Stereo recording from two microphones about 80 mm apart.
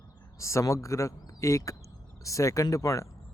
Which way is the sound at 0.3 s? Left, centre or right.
Left.